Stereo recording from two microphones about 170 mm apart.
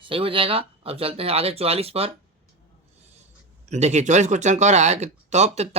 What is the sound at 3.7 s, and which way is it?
Speech, 40° right (ahead or behind).